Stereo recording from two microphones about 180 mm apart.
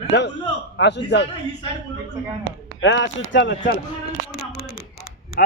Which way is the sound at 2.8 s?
90° left.